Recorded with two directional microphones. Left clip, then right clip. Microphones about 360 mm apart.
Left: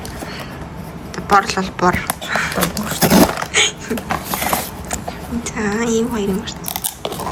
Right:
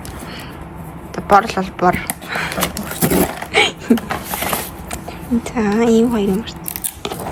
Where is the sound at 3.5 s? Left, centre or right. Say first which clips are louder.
Right 2 dB; centre.